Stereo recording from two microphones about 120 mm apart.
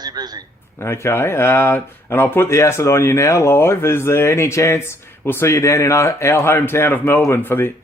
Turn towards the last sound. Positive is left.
turn(degrees=20)  # may be behind; listen again after turning